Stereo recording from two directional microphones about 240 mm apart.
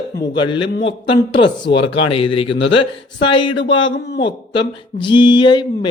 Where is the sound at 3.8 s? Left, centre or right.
Left.